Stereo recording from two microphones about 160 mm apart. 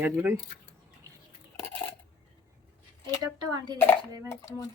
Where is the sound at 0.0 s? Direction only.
10° right (ahead or behind).